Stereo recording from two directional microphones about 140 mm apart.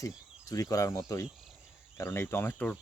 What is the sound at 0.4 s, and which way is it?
Speech, 25° left (ahead or behind).